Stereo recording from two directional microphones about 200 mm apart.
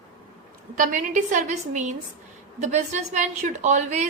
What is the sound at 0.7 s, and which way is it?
A woman's voice, 40° right (ahead or behind).